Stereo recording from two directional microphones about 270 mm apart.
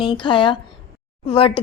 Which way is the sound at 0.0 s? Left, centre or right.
Centre.